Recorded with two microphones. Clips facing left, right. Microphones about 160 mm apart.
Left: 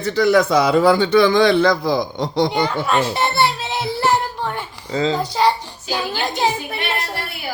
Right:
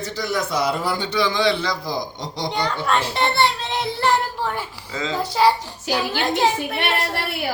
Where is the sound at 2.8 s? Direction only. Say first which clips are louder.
Left 2 dB; 5° left (ahead or behind).